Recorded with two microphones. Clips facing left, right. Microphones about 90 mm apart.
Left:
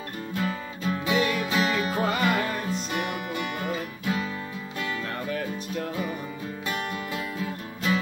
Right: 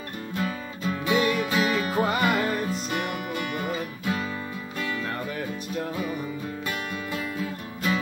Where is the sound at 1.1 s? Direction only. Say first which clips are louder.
Right 2 dB; 15° right (ahead or behind).